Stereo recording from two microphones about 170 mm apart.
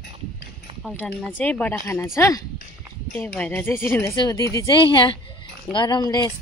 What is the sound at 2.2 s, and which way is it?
Speech, 20° left (ahead or behind).